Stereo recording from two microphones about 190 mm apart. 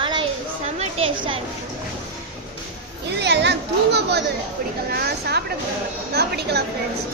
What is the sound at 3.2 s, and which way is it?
Speech, 65° right (ahead or behind).